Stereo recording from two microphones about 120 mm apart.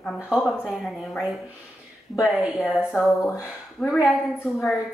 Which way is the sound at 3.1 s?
25° left (ahead or behind).